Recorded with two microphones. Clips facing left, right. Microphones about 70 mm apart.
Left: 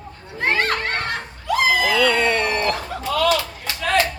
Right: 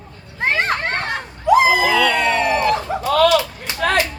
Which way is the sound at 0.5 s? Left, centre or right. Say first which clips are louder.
Right 2 dB; right.